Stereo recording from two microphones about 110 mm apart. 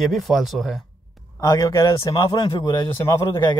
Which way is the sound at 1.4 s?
30° left (ahead or behind).